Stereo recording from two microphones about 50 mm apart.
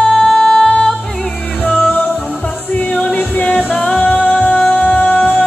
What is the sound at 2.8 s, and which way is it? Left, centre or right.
Music, centre.